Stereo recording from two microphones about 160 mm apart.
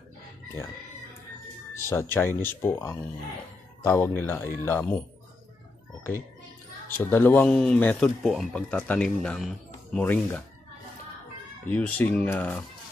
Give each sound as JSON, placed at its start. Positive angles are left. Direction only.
{"t": 1.9, "sound": "speech", "side_deg": 15}
{"t": 7.1, "sound": "speech", "side_deg": 10}
{"t": 11.6, "sound": "speech", "side_deg": 10}